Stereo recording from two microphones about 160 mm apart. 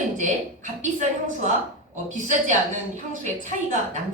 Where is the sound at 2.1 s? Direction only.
50° right (ahead or behind).